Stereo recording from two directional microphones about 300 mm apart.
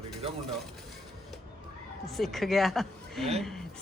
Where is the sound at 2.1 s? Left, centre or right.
Centre.